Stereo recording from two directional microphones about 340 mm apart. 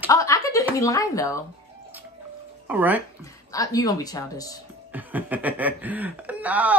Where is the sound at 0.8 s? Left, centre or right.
Centre.